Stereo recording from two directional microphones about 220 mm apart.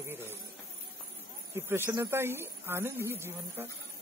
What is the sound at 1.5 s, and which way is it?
A woman's voice, 10° right (ahead or behind).